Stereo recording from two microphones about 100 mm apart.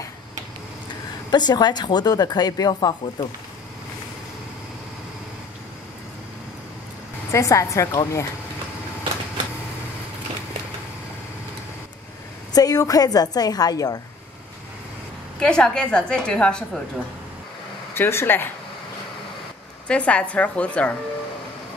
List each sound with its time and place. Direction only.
1.3 s speech: 45° left (ahead or behind)
7.2 s a woman's voice: 30° left (ahead or behind)
12.5 s a woman's voice: 40° left (ahead or behind)
15.3 s a woman's voice: 10° left (ahead or behind)
17.9 s speech: 25° left (ahead or behind)
19.9 s a woman's voice: 10° left (ahead or behind)